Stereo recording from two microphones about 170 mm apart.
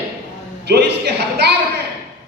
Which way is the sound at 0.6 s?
75° right (ahead or behind).